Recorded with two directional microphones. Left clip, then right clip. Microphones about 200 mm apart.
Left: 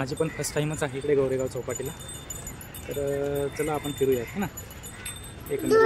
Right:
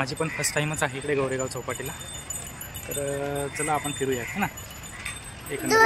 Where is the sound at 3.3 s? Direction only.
5° right (ahead or behind).